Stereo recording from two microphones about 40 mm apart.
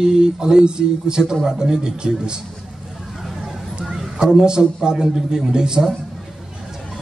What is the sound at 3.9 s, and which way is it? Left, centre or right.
A man's voice, centre.